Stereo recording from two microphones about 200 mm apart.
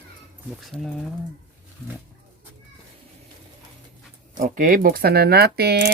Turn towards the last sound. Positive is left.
turn(degrees=-55)  # may be behind; listen again after turning